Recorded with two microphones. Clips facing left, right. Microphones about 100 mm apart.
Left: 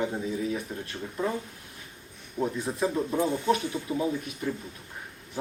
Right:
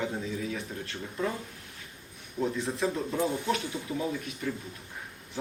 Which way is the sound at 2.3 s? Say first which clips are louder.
Left 1 dB; 20° left (ahead or behind).